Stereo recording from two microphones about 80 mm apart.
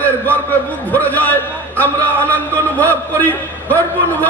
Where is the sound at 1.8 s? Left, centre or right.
Left.